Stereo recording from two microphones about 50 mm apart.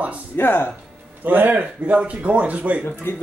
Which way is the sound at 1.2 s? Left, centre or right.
Right.